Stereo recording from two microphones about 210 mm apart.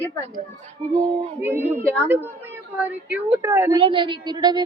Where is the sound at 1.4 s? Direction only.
10° right (ahead or behind).